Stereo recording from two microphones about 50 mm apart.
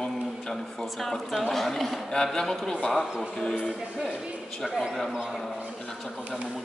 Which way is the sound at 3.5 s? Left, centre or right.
Centre.